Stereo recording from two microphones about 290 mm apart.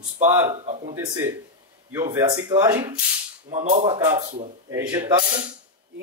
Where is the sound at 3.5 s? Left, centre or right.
Right.